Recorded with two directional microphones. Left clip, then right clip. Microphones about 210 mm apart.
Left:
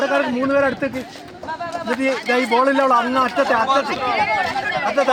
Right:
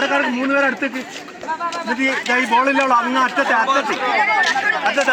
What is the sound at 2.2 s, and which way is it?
Speech, 35° left (ahead or behind).